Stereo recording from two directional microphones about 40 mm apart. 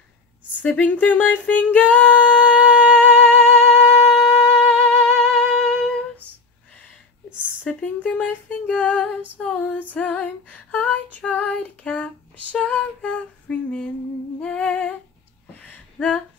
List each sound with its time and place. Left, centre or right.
0.6 s a sound: left; by 4.1 s centre
4.1 s humming: centre
4.5 s music: centre
7.8 s speech: left
8.5 s female singing: left
9.9 s female singing: left
10.2 s female singing: left
11.8 s a sound: left
12.6 s humming: left
16.0 s a sound: left